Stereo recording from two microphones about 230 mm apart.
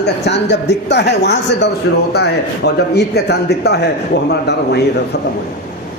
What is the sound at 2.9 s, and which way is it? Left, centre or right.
Speech, left.